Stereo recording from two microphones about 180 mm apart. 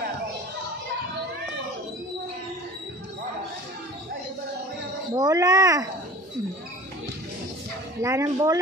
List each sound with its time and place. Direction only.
5.1 s speech: 20° right (ahead or behind)
8.0 s speech: 20° right (ahead or behind)